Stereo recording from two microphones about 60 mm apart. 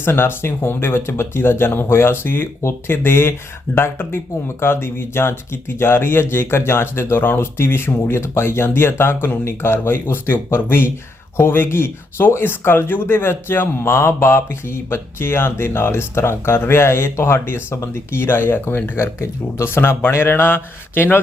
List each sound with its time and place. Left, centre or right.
0.0 s speech: left
18.9 s speech: left
19.6 s speech: left